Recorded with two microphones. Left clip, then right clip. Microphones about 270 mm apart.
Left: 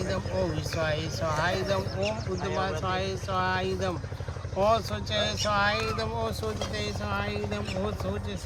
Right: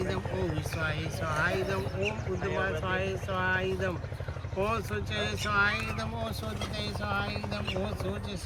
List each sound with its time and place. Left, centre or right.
1.4 s speech: left